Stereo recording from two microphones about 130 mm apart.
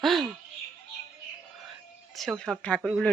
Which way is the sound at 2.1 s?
Centre (ahead or behind).